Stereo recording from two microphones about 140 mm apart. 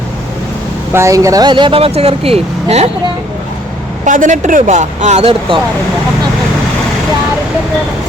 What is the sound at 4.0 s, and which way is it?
Speech, 65° right (ahead or behind).